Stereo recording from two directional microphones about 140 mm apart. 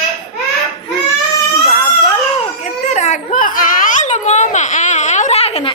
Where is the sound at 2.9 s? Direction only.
55° left (ahead or behind).